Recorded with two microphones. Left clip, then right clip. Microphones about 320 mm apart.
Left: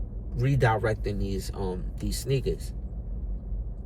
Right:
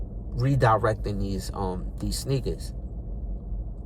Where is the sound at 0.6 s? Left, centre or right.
Centre.